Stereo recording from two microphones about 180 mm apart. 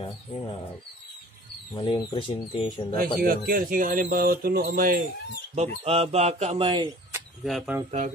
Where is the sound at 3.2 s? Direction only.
50° right (ahead or behind).